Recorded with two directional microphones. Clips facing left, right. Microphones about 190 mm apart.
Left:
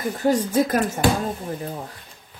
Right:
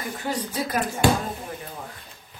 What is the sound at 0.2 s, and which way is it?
Speech, 45° left (ahead or behind).